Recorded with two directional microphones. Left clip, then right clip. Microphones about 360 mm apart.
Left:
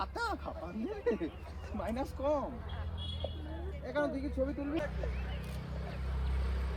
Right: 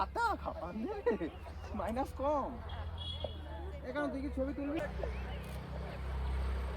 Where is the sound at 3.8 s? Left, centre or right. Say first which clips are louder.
Left 3 dB; centre.